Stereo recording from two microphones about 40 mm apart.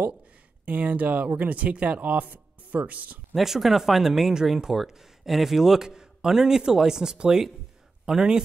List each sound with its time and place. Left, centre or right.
0.7 s speech: right
3.3 s speech: centre